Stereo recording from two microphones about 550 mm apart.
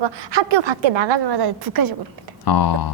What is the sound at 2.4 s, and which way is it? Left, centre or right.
Speech, left.